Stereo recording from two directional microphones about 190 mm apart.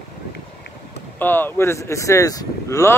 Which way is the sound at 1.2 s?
10° left (ahead or behind).